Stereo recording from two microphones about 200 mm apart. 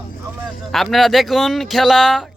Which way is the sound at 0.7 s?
Centre (ahead or behind).